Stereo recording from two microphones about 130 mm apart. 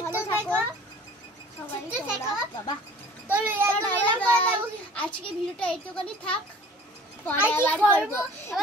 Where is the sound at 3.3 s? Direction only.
15° right (ahead or behind).